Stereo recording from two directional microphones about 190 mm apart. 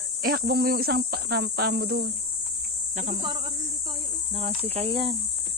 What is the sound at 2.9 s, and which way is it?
Speech, 40° right (ahead or behind).